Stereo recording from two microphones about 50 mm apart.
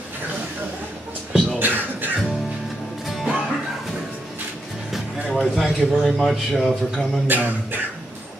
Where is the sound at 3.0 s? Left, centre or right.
Centre.